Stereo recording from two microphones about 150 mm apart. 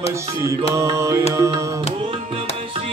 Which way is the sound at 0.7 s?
20° right (ahead or behind).